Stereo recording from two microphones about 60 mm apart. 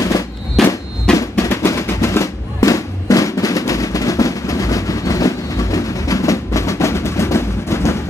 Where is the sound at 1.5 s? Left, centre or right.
Left.